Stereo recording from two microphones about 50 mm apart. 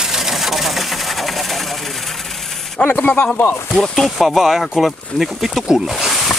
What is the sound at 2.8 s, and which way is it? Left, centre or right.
Speech, left.